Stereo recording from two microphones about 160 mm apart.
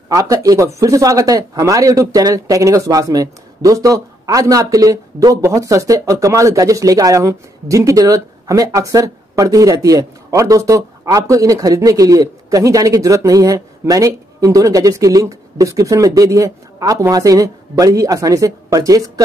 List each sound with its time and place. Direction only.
0.1 s speech: 20° right (ahead or behind)